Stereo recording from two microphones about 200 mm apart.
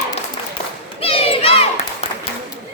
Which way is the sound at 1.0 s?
30° left (ahead or behind).